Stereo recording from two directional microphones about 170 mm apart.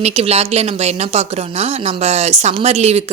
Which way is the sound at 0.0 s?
35° right (ahead or behind).